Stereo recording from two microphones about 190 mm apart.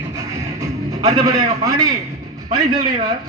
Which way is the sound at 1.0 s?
20° right (ahead or behind).